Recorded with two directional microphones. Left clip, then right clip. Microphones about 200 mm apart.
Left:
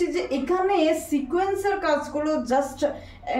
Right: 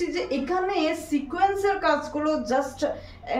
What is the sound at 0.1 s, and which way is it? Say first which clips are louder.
A woman's voice: left 1 dB; 15° right (ahead or behind).